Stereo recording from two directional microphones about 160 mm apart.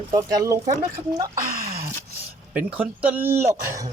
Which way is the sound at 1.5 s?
65° right (ahead or behind).